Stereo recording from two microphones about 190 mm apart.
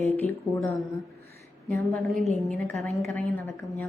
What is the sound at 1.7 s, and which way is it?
A woman's voice, centre (ahead or behind).